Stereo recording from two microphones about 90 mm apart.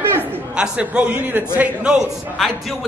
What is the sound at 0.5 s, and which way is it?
A man's voice, 10° right (ahead or behind).